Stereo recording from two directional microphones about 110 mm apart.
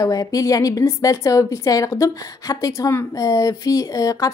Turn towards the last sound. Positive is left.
turn(degrees=30)  # may be behind; listen again after turning